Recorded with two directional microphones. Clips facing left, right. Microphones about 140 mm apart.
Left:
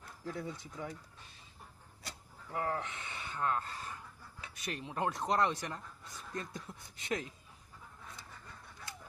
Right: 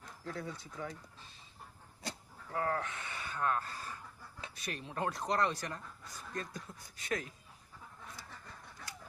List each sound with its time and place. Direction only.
0.3 s speech: 20° left (ahead or behind)
2.5 s speech: 20° left (ahead or behind)